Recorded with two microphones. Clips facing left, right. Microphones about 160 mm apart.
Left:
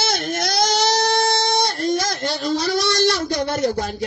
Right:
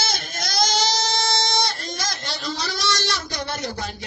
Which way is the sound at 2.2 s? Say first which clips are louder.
Left 8 dB; 50° left (ahead or behind).